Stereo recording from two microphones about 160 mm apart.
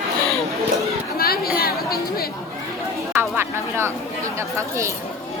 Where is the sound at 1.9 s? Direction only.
70° left (ahead or behind).